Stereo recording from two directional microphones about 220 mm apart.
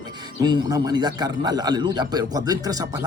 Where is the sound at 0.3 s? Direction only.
20° right (ahead or behind).